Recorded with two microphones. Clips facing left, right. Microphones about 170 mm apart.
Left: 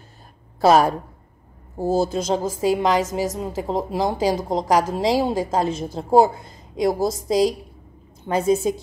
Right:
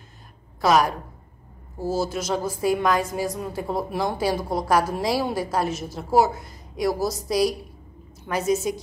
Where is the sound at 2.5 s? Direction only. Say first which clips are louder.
Even; 90° left.